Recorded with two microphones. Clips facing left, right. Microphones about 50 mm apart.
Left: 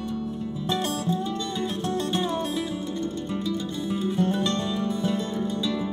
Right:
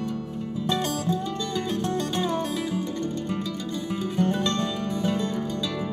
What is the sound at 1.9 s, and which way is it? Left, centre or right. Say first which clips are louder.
Music: left 2 dB; right.